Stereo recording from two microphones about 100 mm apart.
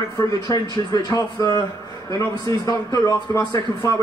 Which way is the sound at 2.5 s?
35° left (ahead or behind).